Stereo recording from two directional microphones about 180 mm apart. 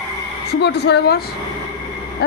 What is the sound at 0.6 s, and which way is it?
Speech, 70° left (ahead or behind).